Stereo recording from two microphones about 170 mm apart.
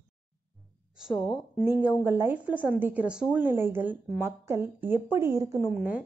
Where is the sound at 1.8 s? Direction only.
10° right (ahead or behind).